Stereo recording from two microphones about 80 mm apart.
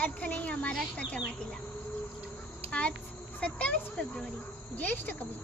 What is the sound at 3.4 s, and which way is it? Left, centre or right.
A child's voice, centre.